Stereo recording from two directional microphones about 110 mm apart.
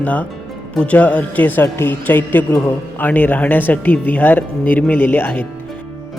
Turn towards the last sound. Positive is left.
turn(degrees=20)  # may be behind; listen again after turning